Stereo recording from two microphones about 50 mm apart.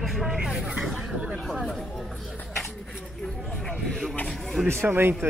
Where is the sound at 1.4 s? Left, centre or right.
Centre.